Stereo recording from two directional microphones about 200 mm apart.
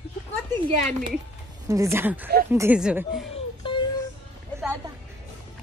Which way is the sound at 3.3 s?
25° left (ahead or behind).